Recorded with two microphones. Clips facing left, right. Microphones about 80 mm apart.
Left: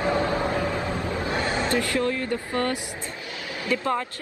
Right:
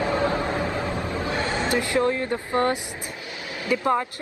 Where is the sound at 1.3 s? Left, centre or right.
Left.